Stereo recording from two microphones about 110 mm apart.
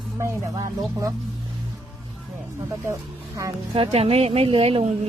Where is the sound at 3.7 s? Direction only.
60° right (ahead or behind).